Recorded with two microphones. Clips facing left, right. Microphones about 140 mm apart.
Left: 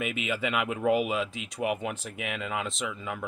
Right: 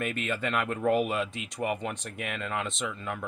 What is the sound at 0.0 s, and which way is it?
Speech, 5° left (ahead or behind).